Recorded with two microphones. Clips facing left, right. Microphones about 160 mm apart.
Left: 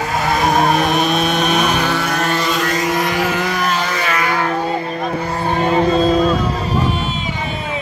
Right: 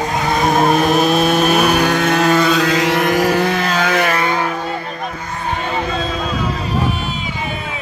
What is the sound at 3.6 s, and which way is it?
Vehicle, 70° right (ahead or behind).